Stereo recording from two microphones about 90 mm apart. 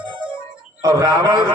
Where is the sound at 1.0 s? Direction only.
40° right (ahead or behind).